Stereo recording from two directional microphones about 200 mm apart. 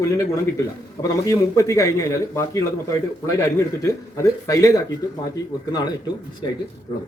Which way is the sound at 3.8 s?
15° left (ahead or behind).